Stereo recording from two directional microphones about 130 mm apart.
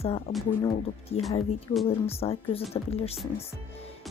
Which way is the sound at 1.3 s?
50° left (ahead or behind).